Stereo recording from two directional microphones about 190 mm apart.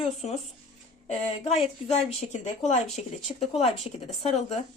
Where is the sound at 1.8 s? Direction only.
35° left (ahead or behind).